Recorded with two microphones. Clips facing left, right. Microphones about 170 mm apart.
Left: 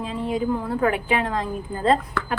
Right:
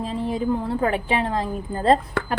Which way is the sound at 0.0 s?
35° right (ahead or behind).